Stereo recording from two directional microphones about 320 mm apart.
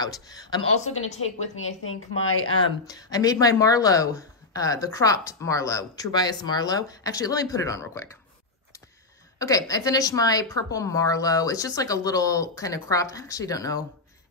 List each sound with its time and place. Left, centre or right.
0.0 s a woman's voice: centre
1.6 s a woman's voice: left
2.9 s a woman's voice: centre
9.4 s a woman's voice: centre